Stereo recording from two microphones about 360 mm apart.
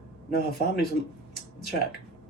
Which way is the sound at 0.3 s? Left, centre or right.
Left.